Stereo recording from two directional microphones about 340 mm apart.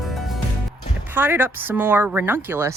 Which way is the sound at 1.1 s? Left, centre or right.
Centre.